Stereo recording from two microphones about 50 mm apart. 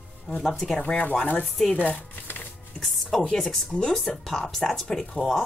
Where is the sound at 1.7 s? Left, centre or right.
Left.